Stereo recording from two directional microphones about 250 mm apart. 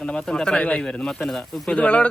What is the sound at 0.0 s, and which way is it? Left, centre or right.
Speech, centre.